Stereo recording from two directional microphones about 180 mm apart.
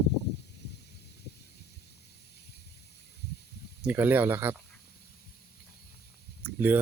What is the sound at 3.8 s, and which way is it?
Speech, 10° right (ahead or behind).